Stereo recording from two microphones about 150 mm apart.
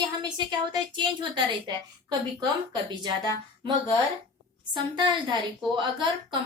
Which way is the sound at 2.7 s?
30° right (ahead or behind).